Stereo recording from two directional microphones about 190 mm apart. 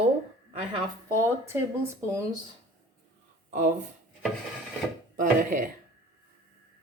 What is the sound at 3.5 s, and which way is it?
Speech, 40° right (ahead or behind).